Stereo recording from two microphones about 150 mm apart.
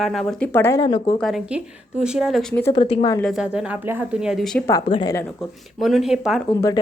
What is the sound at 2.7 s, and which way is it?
Speech, 35° left (ahead or behind).